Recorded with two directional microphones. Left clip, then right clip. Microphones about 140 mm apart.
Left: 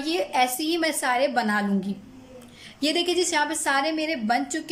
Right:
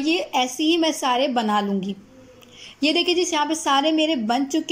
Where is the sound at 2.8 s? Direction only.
Centre (ahead or behind).